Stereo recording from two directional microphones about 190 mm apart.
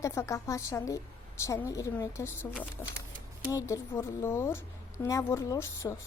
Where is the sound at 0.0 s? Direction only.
15° left (ahead or behind).